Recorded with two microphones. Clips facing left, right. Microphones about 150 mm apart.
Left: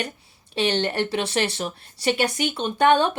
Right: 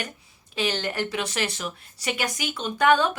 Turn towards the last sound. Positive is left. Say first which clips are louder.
# left 2 dB
turn(degrees=25)  # may be behind; listen again after turning